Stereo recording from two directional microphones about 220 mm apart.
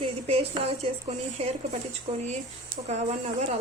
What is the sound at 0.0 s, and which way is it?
Speech, 25° right (ahead or behind).